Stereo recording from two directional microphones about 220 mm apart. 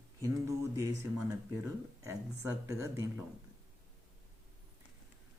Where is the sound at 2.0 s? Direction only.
15° right (ahead or behind).